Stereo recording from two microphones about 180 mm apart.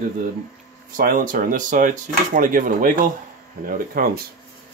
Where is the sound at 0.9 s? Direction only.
50° right (ahead or behind).